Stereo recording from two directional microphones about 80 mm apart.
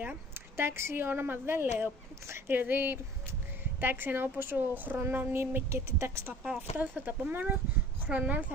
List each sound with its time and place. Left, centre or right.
0.6 s a woman's voice: right